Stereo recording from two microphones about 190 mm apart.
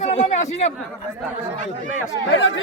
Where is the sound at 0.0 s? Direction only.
35° left (ahead or behind).